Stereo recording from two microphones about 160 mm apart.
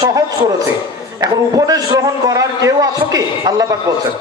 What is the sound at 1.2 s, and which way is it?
A man's voice, 25° right (ahead or behind).